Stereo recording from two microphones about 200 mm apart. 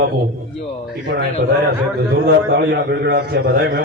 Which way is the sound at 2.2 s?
55° right (ahead or behind).